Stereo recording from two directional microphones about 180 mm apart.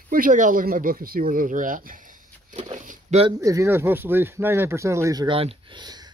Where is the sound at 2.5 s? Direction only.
40° right (ahead or behind).